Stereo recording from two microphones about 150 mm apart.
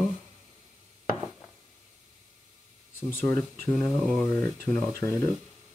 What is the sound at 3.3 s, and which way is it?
Speech, centre (ahead or behind).